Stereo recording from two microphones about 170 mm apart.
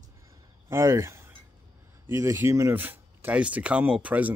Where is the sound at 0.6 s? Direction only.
15° right (ahead or behind).